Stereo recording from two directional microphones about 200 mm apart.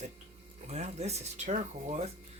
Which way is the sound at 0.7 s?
35° right (ahead or behind).